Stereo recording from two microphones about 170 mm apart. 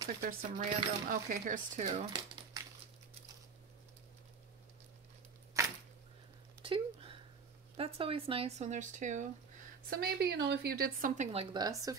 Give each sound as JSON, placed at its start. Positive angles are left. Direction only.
{"t": 0.2, "sound": "speech", "side_deg": -55}
{"t": 1.8, "sound": "speech", "side_deg": -45}
{"t": 5.5, "sound": "a sound", "side_deg": -20}
{"t": 6.6, "sound": "a sound", "side_deg": -30}
{"t": 7.7, "sound": "speech", "side_deg": -35}
{"t": 9.8, "sound": "speech", "side_deg": -65}
{"t": 11.3, "sound": "speech", "side_deg": -25}